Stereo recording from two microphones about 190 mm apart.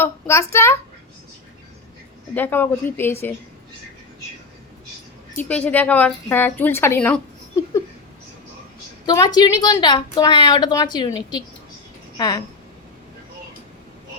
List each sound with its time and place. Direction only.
0.0 s a woman's voice: 15° left (ahead or behind)
2.3 s a woman's voice: 10° left (ahead or behind)
5.4 s a woman's voice: 5° left (ahead or behind)
9.0 s a woman's voice: 20° left (ahead or behind)